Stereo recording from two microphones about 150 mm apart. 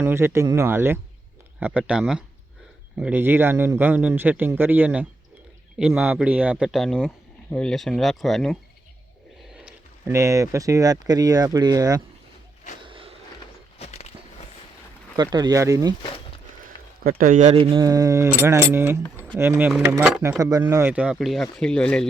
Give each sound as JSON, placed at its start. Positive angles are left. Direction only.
{"t": 0.0, "sound": "a man's voice", "side_deg": -15}
{"t": 10.1, "sound": "speech", "side_deg": -20}
{"t": 12.8, "sound": "vehicle", "side_deg": -35}
{"t": 13.7, "sound": "a sound", "side_deg": 45}
{"t": 15.1, "sound": "speech", "side_deg": -25}
{"t": 17.0, "sound": "speech", "side_deg": -75}
{"t": 17.5, "sound": "a man's voice", "side_deg": -35}
{"t": 20.4, "sound": "speech", "side_deg": -20}